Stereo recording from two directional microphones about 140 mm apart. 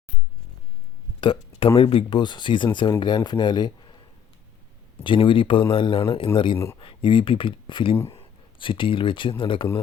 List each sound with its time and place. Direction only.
1.2 s speech: 40° left (ahead or behind)
5.0 s speech: 35° left (ahead or behind)
7.9 s speech: 20° left (ahead or behind)
8.2 s speech: 35° left (ahead or behind)